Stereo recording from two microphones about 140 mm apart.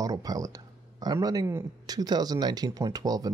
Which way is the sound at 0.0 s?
25° right (ahead or behind).